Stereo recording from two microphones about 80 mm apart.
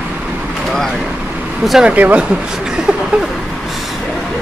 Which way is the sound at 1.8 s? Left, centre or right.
Centre.